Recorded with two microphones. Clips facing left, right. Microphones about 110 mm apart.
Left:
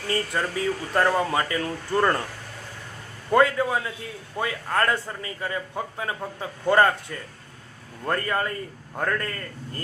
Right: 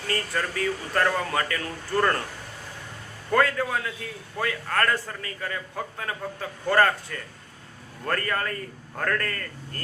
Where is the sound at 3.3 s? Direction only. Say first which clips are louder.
Left 3 dB; 20° left (ahead or behind).